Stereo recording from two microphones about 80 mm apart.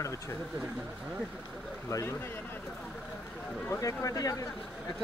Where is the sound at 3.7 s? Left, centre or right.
Left.